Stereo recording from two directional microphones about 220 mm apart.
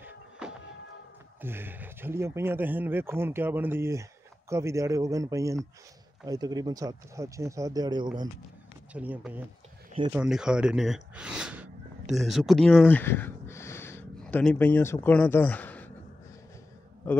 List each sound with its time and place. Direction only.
0.0 s music: 5° right (ahead or behind)
1.4 s speech: 10° right (ahead or behind)
8.9 s speech: 5° right (ahead or behind)